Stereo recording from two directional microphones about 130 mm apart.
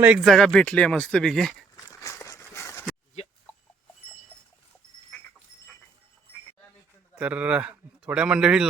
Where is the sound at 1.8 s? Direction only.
25° left (ahead or behind).